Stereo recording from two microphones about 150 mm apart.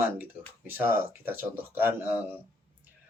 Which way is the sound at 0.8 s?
15° right (ahead or behind).